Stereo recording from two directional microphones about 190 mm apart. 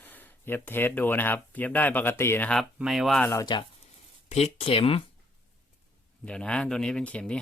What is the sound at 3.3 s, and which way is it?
Speech, 20° left (ahead or behind).